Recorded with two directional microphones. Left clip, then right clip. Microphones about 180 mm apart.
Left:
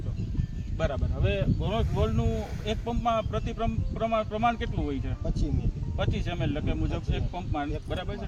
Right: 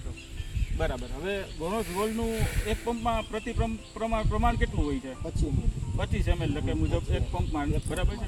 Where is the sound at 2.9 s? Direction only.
30° left (ahead or behind).